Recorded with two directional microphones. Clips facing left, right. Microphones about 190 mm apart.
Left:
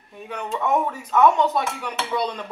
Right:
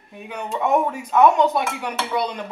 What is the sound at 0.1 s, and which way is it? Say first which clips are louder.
Speech: right 1 dB; 10° right (ahead or behind).